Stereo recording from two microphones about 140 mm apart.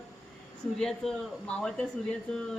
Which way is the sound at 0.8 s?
5° left (ahead or behind).